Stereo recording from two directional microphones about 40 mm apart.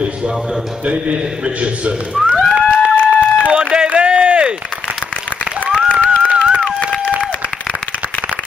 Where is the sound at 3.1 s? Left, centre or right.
Left.